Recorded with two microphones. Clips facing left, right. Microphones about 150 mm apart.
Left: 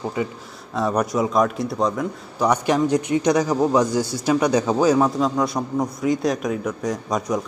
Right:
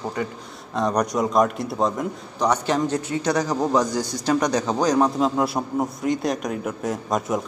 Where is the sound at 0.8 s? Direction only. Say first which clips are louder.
Left 1 dB; 5° left (ahead or behind).